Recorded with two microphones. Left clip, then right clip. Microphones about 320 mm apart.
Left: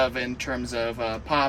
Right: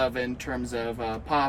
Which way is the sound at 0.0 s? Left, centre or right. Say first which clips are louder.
Left 2 dB; centre.